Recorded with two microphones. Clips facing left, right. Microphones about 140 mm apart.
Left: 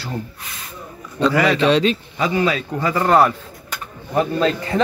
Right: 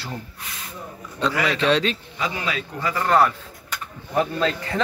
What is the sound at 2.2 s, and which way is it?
Speech, 40° left (ahead or behind).